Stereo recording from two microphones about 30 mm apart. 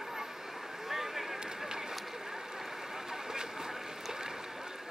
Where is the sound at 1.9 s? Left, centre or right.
Centre.